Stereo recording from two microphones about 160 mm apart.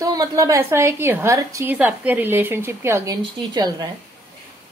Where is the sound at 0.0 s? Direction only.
20° right (ahead or behind).